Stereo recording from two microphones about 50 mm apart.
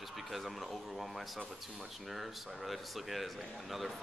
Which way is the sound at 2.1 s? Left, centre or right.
Centre.